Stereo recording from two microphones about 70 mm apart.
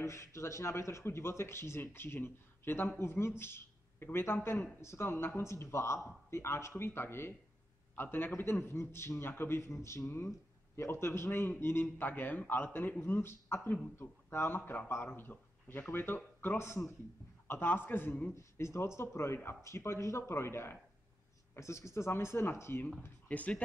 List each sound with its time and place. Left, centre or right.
0.0 s a man's voice: left
18.3 s a man's voice: left
23.2 s speech: left